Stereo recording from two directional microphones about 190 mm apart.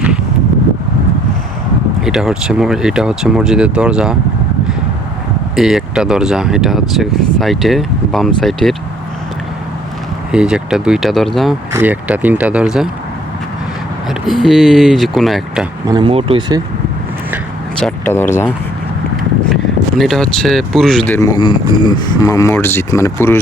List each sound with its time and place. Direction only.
2.0 s speech: centre (ahead or behind)
5.5 s speech: centre (ahead or behind)
10.3 s speech: 5° right (ahead or behind)
11.7 s speech: 10° right (ahead or behind)
14.4 s speech: centre (ahead or behind)
15.9 s speech: 25° right (ahead or behind)
17.7 s speech: 5° left (ahead or behind)
20.0 s speech: centre (ahead or behind)
21.1 s speech: 15° left (ahead or behind)